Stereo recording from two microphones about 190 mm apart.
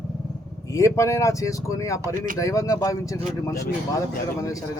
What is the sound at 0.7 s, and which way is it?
Speech, 15° left (ahead or behind).